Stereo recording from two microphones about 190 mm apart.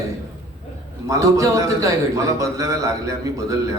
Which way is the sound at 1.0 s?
15° right (ahead or behind).